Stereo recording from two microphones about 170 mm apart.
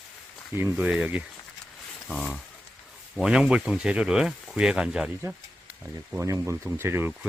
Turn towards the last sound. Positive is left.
turn(degrees=-15)  # may be behind; listen again after turning